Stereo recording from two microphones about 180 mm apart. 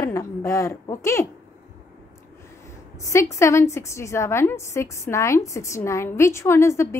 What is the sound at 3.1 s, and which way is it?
A woman's voice, 15° left (ahead or behind).